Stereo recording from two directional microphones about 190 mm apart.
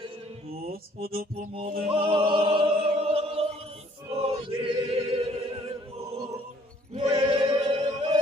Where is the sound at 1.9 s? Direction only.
30° right (ahead or behind).